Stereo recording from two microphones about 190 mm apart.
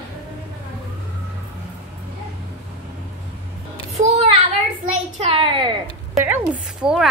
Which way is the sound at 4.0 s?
40° right (ahead or behind).